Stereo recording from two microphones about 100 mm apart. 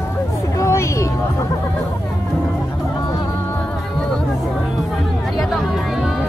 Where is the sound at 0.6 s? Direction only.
30° left (ahead or behind).